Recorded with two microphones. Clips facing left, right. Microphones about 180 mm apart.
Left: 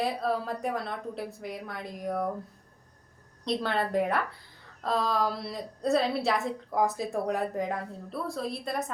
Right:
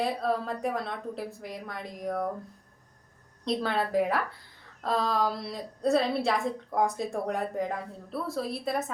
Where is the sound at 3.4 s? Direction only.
Centre (ahead or behind).